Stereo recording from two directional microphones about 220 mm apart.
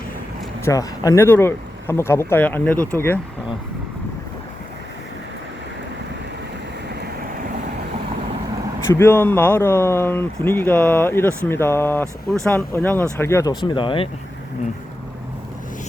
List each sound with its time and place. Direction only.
0.6 s speech: 15° left (ahead or behind)
8.9 s speech: 10° left (ahead or behind)